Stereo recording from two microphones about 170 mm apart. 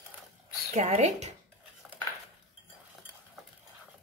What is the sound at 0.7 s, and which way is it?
Speech, 40° right (ahead or behind).